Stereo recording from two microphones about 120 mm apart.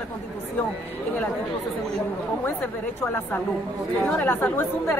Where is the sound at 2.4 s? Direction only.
20° left (ahead or behind).